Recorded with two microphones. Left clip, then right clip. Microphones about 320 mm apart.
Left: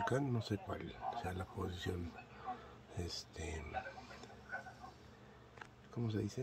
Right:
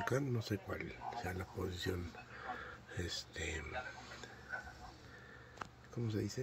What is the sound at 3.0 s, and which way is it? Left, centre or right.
Speech, centre.